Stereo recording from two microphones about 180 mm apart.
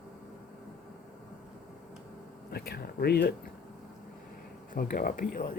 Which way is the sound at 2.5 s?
60° left (ahead or behind).